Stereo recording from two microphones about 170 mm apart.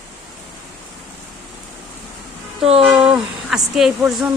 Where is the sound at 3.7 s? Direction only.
5° right (ahead or behind).